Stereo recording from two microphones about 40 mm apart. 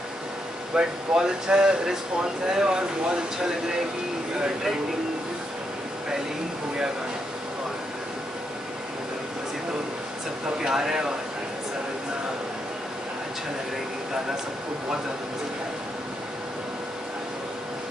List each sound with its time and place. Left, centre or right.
0.7 s speech: centre
10.6 s speech: centre